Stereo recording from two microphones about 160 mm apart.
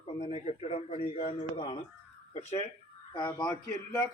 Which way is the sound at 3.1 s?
30° left (ahead or behind).